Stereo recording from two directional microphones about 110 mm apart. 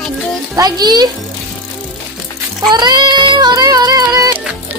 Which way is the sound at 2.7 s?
40° right (ahead or behind).